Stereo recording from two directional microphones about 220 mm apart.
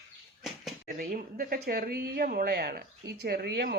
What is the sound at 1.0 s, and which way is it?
A woman's voice, 40° right (ahead or behind).